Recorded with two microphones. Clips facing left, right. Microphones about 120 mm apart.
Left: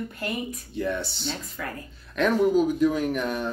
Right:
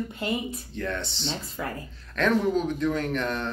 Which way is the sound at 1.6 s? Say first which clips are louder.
Right 3 dB; 25° right (ahead or behind).